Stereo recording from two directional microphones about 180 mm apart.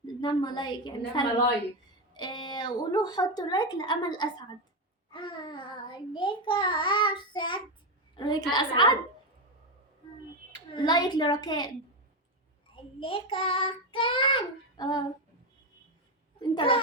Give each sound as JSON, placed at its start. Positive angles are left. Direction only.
{"t": 0.2, "sound": "child singing", "side_deg": 25}
{"t": 10.8, "sound": "child singing", "side_deg": 25}
{"t": 12.7, "sound": "child singing", "side_deg": 30}
{"t": 16.4, "sound": "child singing", "side_deg": 30}